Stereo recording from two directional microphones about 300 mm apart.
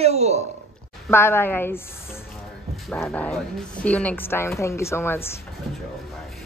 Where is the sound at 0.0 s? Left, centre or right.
Right.